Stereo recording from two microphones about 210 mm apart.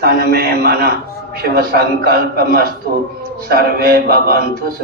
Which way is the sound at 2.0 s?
45° right (ahead or behind).